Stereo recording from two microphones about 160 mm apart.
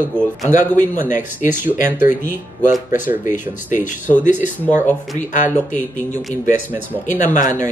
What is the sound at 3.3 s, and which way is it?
Speech, 55° left (ahead or behind).